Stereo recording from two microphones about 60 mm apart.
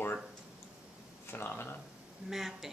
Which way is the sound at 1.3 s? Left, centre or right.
Left.